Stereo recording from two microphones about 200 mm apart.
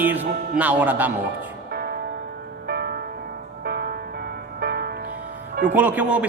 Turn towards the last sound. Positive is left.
turn(degrees=-5)  # may be behind; listen again after turning